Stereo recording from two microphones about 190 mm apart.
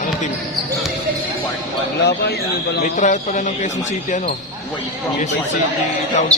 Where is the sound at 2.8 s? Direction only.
40° left (ahead or behind).